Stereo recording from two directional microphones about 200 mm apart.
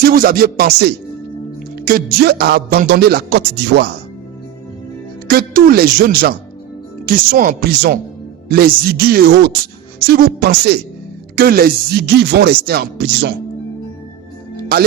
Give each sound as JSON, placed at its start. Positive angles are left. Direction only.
{"t": 0.0, "sound": "a man's voice", "side_deg": -45}
{"t": 5.3, "sound": "a man's voice", "side_deg": -45}